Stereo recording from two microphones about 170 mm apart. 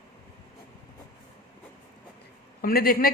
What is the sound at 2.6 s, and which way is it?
Speech, 60° left (ahead or behind).